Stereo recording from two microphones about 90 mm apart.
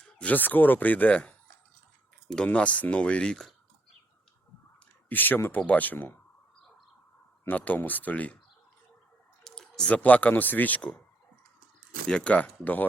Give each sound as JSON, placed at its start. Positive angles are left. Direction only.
{"t": 0.0, "sound": "speech", "side_deg": 15}
{"t": 2.3, "sound": "speech", "side_deg": 10}
{"t": 5.0, "sound": "speech", "side_deg": 20}
{"t": 7.4, "sound": "speech", "side_deg": 15}
{"t": 9.4, "sound": "speech", "side_deg": 5}
{"t": 12.0, "sound": "speech", "side_deg": 10}